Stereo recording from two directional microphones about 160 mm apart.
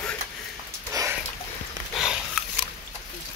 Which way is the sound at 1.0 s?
20° right (ahead or behind).